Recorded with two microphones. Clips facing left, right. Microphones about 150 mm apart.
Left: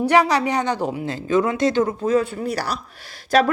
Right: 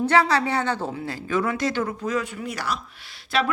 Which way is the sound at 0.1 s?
15° left (ahead or behind).